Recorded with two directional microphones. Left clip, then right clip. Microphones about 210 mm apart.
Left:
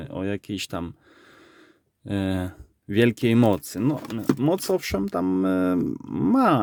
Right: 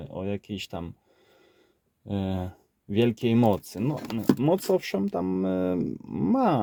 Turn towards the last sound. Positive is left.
turn(degrees=20)  # may be behind; listen again after turning